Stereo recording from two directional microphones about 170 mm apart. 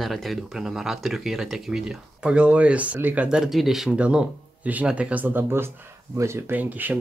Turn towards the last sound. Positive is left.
turn(degrees=-10)  # may be behind; listen again after turning